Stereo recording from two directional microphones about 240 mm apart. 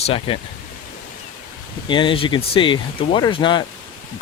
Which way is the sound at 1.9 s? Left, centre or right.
Left.